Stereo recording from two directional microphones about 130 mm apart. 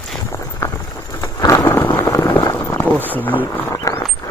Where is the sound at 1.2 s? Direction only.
25° left (ahead or behind).